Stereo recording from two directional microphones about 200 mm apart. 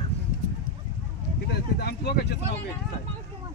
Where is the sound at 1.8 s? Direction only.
55° left (ahead or behind).